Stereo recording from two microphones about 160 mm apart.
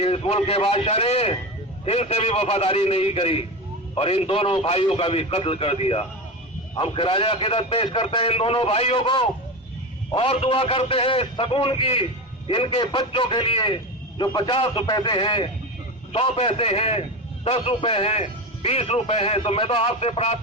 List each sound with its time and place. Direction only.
0.0 s a man's voice: 40° left (ahead or behind)